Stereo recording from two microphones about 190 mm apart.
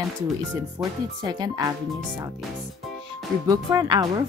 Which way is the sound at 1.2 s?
20° right (ahead or behind).